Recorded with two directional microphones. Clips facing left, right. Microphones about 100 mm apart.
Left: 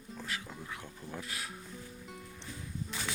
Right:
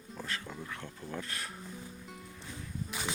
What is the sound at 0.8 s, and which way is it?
Speech, 5° left (ahead or behind).